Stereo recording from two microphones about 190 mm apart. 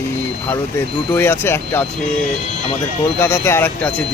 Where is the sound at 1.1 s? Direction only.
10° left (ahead or behind).